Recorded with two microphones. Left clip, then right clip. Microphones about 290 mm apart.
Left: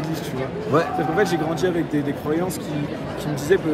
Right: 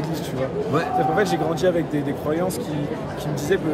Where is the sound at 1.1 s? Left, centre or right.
Centre.